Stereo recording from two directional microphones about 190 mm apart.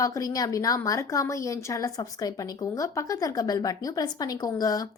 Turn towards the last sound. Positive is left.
turn(degrees=20)  # may be behind; listen again after turning